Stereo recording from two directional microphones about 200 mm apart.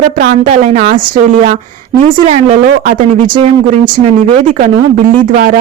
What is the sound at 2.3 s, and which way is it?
A woman's voice, 35° right (ahead or behind).